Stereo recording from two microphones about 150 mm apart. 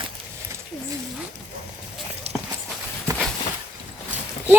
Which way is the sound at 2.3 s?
45° right (ahead or behind).